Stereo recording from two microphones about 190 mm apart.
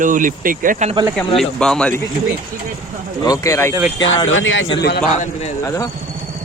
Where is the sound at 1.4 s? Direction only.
5° left (ahead or behind).